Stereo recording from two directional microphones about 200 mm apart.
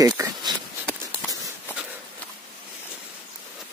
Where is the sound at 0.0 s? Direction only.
15° right (ahead or behind).